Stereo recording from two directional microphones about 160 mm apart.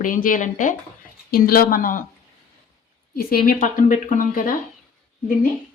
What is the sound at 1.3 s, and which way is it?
Speech, 65° left (ahead or behind).